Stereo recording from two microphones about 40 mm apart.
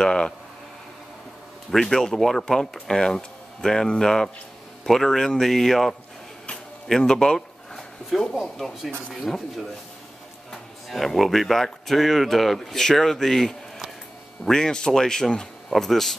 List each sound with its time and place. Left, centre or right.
0.0 s speech: left
1.7 s speech: centre
10.9 s speech: centre